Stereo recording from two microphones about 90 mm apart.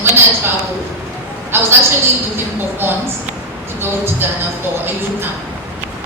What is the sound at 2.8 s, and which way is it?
A woman's voice, 25° right (ahead or behind).